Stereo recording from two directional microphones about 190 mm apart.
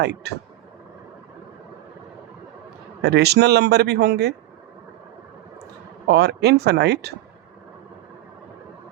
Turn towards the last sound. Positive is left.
turn(degrees=-60)  # may be behind; listen again after turning